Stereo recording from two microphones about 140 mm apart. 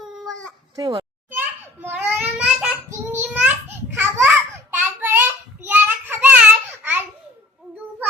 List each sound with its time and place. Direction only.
0.0 s baby cry: 5° left (ahead or behind)
0.8 s a child's voice: 30° right (ahead or behind)
2.0 s child singing: 10° right (ahead or behind)
3.0 s a sound: 15° right (ahead or behind)
5.6 s child singing: 15° right (ahead or behind)